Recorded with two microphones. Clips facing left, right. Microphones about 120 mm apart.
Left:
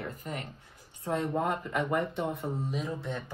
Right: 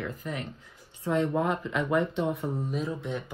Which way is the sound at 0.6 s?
90° right.